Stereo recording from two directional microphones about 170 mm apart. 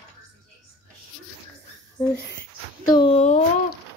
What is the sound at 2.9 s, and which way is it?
Speech, 30° left (ahead or behind).